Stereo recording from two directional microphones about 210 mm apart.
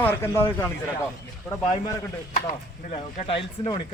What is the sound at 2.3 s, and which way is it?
Speech, 35° left (ahead or behind).